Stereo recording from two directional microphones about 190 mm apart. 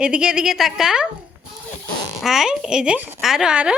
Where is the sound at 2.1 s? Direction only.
Centre (ahead or behind).